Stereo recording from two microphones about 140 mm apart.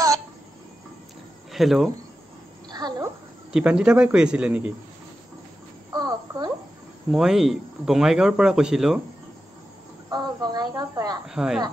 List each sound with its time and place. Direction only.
1.5 s speech: centre (ahead or behind)
2.7 s a sound: 30° right (ahead or behind)
3.5 s a man's voice: 5° right (ahead or behind)
5.9 s a sound: 25° right (ahead or behind)
7.1 s speech: 5° right (ahead or behind)
10.1 s speech: 30° right (ahead or behind)
11.2 s speech: 5° right (ahead or behind)